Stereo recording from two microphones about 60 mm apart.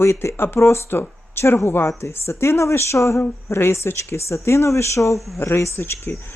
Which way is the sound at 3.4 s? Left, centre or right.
Left.